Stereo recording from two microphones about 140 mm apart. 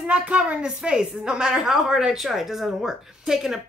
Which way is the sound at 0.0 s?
10° right (ahead or behind).